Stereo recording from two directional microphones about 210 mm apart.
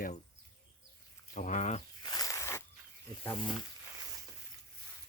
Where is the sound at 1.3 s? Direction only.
35° left (ahead or behind).